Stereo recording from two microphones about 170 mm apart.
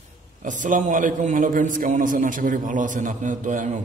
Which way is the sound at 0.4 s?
50° right (ahead or behind).